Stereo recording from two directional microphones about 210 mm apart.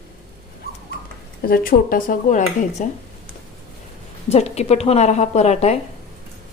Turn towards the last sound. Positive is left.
turn(degrees=30)  # may be behind; listen again after turning